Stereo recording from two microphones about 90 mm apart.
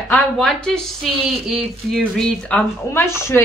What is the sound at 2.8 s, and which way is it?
Speech, 30° left (ahead or behind).